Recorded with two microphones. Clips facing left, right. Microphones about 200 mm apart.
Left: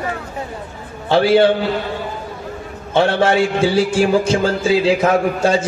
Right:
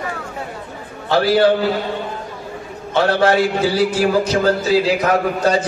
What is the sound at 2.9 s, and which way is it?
A man's voice, 25° left (ahead or behind).